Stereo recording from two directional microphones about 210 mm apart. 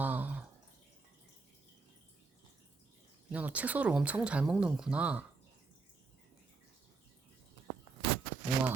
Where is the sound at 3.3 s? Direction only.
5° right (ahead or behind).